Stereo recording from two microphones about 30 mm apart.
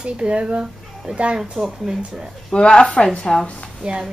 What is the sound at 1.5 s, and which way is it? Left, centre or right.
Speech, centre.